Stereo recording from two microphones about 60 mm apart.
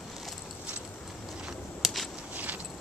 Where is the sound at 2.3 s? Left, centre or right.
Right.